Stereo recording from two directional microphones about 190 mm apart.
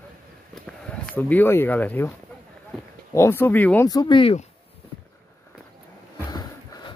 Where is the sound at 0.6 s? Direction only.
5° left (ahead or behind).